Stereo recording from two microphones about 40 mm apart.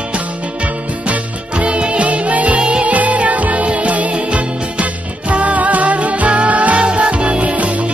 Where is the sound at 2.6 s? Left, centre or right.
Right.